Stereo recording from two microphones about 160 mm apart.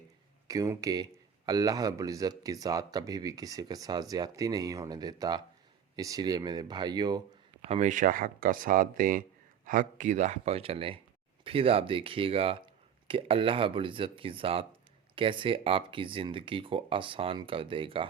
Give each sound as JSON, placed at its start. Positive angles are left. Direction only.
{"t": 0.4, "sound": "speech", "side_deg": -20}
{"t": 7.7, "sound": "speech", "side_deg": -50}